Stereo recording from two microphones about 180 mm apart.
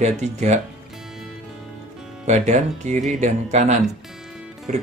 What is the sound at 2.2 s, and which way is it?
Speech, 40° right (ahead or behind).